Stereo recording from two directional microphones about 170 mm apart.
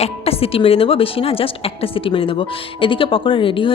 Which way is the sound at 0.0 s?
35° left (ahead or behind).